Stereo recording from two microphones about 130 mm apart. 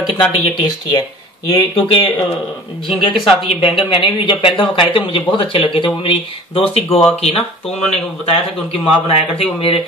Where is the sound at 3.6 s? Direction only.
40° left (ahead or behind).